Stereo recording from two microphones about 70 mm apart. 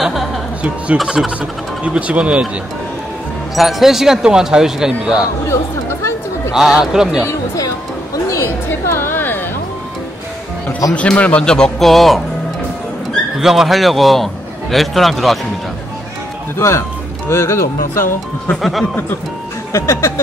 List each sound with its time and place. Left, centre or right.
0.0 s music: centre
0.6 s speech: centre
0.9 s speech: centre
3.5 s speech: centre
6.5 s speech: centre
7.2 s speech: left
8.6 s a sound: left
10.9 s speech: centre
13.4 s a man's voice: centre
16.5 s music: left
17.3 s speech: left
18.6 s a man's voice: centre
19.7 s music: left